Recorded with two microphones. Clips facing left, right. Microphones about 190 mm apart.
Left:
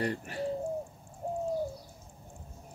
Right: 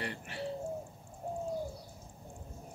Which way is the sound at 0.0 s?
40° left (ahead or behind).